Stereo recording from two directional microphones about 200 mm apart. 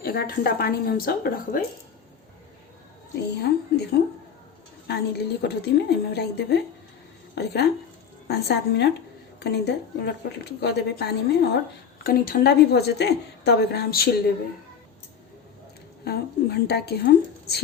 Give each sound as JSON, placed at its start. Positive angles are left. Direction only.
{"t": 0.0, "sound": "a woman's voice", "side_deg": 50}
{"t": 3.2, "sound": "a woman's voice", "side_deg": 55}
{"t": 16.0, "sound": "a woman's voice", "side_deg": 55}